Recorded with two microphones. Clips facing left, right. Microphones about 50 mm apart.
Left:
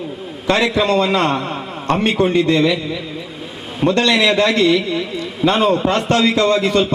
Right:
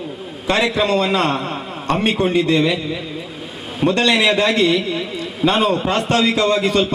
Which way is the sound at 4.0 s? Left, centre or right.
Centre.